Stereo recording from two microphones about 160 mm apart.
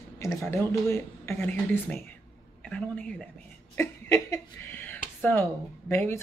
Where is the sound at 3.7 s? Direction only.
20° left (ahead or behind).